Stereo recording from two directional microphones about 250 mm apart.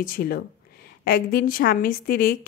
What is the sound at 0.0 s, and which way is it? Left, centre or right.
A woman's voice, left.